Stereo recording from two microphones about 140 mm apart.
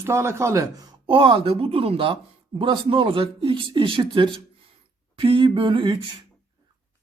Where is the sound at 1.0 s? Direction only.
35° right (ahead or behind).